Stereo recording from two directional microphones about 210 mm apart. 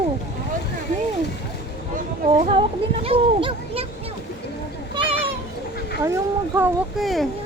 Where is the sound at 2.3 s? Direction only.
25° right (ahead or behind).